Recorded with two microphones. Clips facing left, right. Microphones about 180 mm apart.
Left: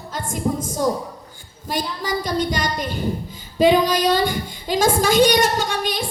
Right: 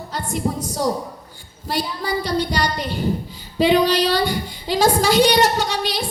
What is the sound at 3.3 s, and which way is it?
A woman's voice, 45° left (ahead or behind).